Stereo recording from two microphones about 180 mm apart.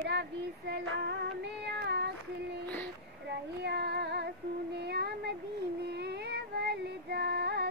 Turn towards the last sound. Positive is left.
turn(degrees=-65)  # may be behind; listen again after turning